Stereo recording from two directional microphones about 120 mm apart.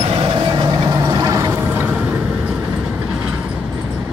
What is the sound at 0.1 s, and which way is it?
Vehicle, 45° right (ahead or behind).